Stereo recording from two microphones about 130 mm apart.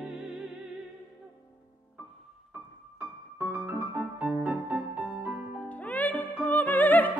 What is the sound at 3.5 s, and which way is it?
Music, 15° right (ahead or behind).